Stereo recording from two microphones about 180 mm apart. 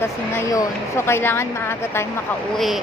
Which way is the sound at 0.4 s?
15° left (ahead or behind).